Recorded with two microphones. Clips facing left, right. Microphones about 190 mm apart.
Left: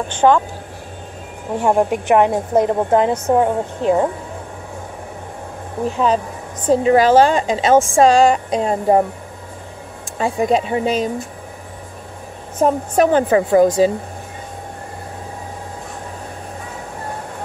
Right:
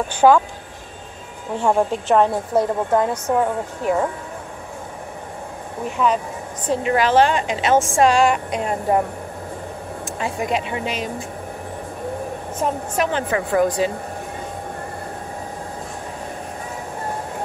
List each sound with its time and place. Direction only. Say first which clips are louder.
0.1 s speech: even; 10° right (ahead or behind)
1.6 s a woman's voice: left 3 dB; 15° left (ahead or behind)
5.9 s a woman's voice: left 3 dB; 30° left (ahead or behind)
10.1 s a woman's voice: left 7 dB; 35° left (ahead or behind)
12.6 s a woman's voice: left 7 dB; 40° left (ahead or behind)